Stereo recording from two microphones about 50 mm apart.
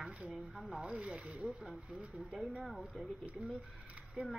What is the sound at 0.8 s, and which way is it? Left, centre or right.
Speech, centre.